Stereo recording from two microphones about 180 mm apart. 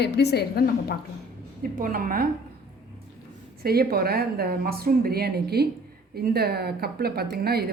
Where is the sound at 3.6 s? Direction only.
60° right (ahead or behind).